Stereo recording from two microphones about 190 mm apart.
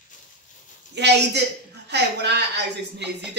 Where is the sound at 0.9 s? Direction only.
60° right (ahead or behind).